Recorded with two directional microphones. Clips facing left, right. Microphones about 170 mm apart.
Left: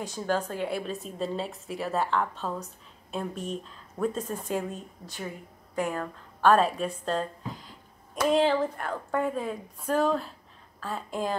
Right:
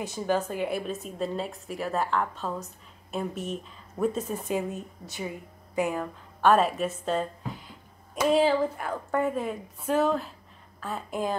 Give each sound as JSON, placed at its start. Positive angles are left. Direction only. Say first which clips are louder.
{"t": 0.0, "sound": "a woman's voice", "louder": "right 2 dB", "side_deg": -10}